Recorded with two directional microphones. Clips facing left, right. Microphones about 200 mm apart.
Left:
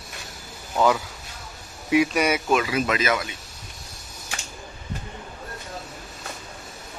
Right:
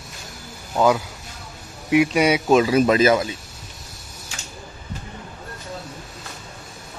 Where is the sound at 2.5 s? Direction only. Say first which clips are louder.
Right 7 dB; 35° right (ahead or behind).